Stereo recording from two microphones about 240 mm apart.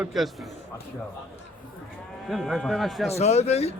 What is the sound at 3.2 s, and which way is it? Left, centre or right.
Speech, left.